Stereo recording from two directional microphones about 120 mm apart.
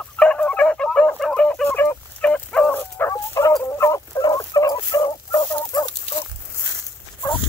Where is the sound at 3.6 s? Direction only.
20° left (ahead or behind).